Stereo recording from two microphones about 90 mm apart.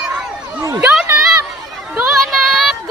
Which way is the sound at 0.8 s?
10° right (ahead or behind).